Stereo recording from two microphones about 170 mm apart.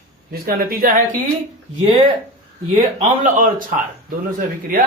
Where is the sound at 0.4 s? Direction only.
55° right (ahead or behind).